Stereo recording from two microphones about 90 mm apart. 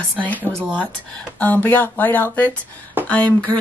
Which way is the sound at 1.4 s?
20° left (ahead or behind).